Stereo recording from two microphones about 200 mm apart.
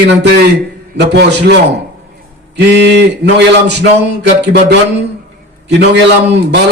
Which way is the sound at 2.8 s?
60° right (ahead or behind).